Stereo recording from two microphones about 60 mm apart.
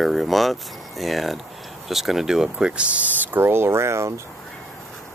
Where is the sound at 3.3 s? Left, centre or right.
Right.